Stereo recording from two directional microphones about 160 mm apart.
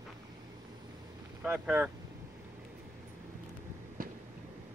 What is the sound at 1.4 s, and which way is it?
Speech, 10° right (ahead or behind).